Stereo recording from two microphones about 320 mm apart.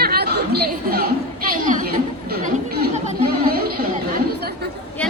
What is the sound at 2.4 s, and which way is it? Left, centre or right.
Chatter, right.